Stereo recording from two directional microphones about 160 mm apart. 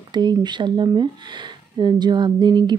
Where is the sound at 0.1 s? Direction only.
25° right (ahead or behind).